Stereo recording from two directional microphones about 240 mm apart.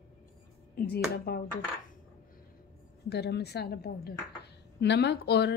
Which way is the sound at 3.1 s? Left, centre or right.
Left.